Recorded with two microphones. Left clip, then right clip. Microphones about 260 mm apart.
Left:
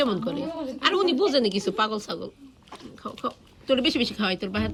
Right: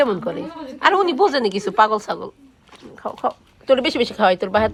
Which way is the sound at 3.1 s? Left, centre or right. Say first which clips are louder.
Right 9 dB; centre.